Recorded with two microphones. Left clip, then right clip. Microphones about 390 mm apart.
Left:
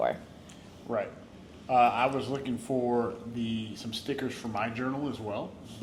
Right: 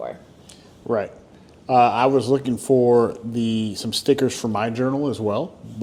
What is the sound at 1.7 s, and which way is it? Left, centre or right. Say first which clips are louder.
Speech: right 8 dB; right.